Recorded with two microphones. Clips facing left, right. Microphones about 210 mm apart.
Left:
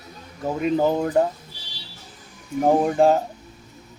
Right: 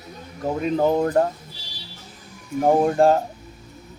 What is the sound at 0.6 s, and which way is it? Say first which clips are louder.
Speech: right 1 dB; centre (ahead or behind).